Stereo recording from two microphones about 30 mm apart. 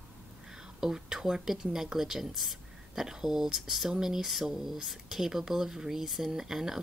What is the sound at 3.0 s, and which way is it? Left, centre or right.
A woman's voice, centre.